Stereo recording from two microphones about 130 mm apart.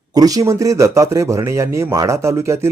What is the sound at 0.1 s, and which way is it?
Speech, 30° right (ahead or behind).